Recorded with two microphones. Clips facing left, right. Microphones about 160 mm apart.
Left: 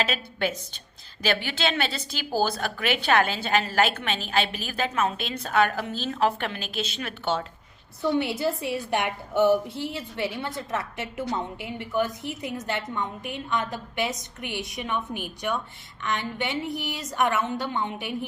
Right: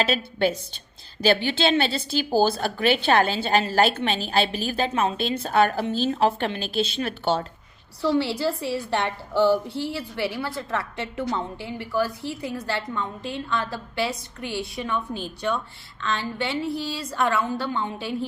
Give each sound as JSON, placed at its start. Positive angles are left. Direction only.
{"t": 0.0, "sound": "a woman's voice", "side_deg": -30}
{"t": 8.0, "sound": "a woman's voice", "side_deg": 20}